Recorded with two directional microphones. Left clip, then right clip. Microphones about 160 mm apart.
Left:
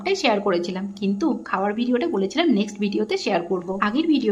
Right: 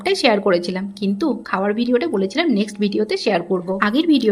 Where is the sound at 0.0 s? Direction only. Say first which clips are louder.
Right 4 dB; 25° right (ahead or behind).